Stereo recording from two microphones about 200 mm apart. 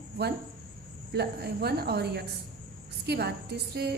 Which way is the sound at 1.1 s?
55° right (ahead or behind).